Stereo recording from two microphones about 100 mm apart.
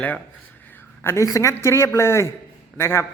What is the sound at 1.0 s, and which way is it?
A woman's voice, 25° left (ahead or behind).